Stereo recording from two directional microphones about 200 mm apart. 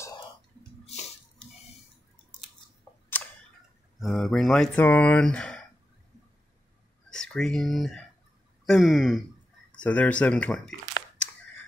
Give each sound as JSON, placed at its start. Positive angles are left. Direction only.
{"t": 4.0, "sound": "speech", "side_deg": 0}
{"t": 7.1, "sound": "speech", "side_deg": 5}